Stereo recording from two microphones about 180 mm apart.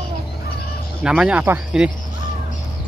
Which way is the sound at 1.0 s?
5° right (ahead or behind).